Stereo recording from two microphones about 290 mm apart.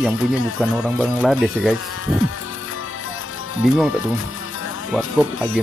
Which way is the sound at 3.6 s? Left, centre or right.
Centre.